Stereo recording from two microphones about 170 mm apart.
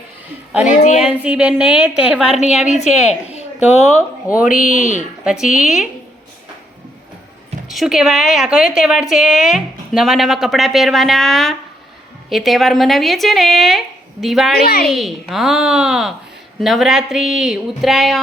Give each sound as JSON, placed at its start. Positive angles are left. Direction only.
{"t": 0.7, "sound": "speech", "side_deg": 45}
{"t": 1.0, "sound": "a woman's voice", "side_deg": -5}
{"t": 4.4, "sound": "speech", "side_deg": 50}
{"t": 5.2, "sound": "a woman's voice", "side_deg": -5}
{"t": 7.7, "sound": "a woman's voice", "side_deg": 0}
{"t": 14.5, "sound": "a woman's voice", "side_deg": 65}
{"t": 14.8, "sound": "a woman's voice", "side_deg": 0}